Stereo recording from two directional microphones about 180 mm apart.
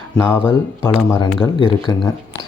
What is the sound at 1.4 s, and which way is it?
Speech, 30° left (ahead or behind).